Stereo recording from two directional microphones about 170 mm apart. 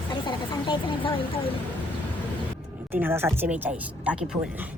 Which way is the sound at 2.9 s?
10° right (ahead or behind).